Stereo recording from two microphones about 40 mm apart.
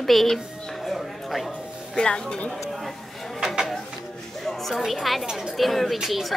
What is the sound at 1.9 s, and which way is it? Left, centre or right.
Speech, centre.